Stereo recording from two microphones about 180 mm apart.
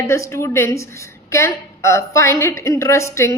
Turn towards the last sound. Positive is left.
turn(degrees=15)  # may be behind; listen again after turning